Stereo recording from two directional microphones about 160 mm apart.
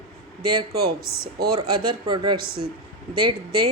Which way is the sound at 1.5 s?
30° right (ahead or behind).